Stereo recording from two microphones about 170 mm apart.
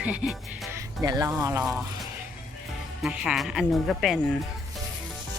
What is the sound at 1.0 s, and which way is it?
Speech, 20° right (ahead or behind).